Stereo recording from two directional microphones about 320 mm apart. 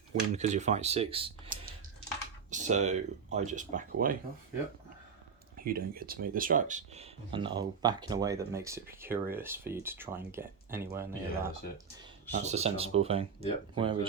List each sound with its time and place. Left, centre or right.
0.3 s speech: right
5.6 s speech: right; by 11.5 s centre
12.3 s speech: right